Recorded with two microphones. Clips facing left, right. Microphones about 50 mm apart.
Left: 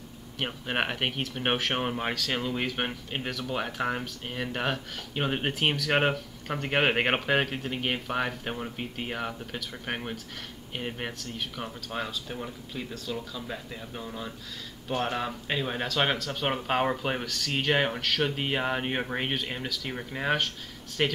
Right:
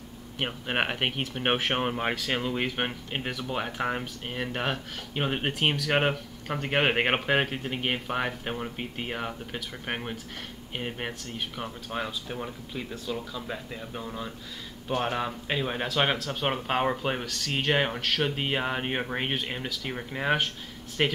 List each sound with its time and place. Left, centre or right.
0.4 s speech: centre